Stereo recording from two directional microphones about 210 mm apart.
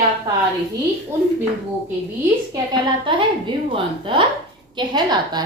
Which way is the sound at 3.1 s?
25° right (ahead or behind).